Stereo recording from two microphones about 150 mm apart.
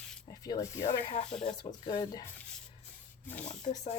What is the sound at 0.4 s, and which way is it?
Speech, 25° left (ahead or behind).